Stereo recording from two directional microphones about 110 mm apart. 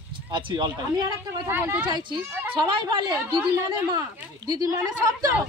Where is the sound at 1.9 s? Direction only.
45° right (ahead or behind).